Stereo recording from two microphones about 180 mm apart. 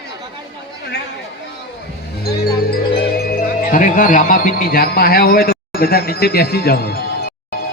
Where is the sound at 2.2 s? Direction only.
55° left (ahead or behind).